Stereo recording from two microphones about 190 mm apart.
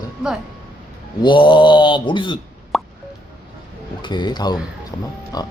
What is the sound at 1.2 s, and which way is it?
Mantra, 25° left (ahead or behind).